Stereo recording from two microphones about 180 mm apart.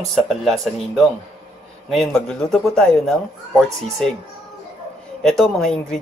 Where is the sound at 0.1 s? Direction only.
Centre (ahead or behind).